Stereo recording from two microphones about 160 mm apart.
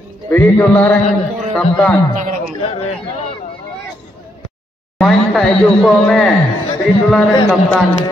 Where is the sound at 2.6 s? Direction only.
40° left (ahead or behind).